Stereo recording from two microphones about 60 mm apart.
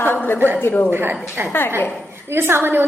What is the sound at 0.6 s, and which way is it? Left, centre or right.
Speech, left.